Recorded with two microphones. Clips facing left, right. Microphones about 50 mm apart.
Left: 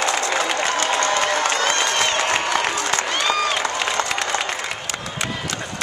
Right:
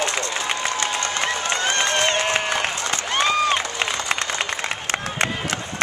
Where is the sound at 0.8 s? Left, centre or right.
Left.